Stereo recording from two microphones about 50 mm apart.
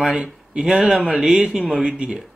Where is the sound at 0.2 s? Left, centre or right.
Centre.